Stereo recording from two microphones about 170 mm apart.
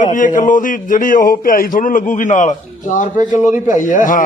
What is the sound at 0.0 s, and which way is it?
A man's voice, 50° left (ahead or behind).